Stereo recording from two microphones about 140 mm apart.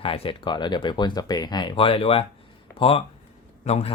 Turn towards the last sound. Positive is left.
turn(degrees=50)  # may be behind; listen again after turning